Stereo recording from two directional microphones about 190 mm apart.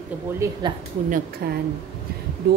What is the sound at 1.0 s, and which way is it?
Speech, 45° right (ahead or behind).